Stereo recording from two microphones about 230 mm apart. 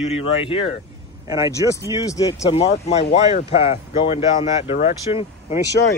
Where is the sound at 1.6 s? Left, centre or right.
Centre.